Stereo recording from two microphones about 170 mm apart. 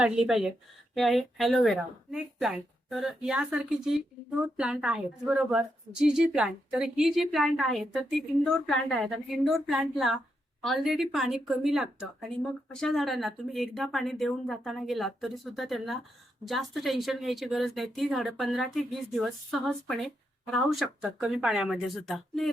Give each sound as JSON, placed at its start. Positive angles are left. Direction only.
{"t": 0.0, "sound": "speech", "side_deg": -5}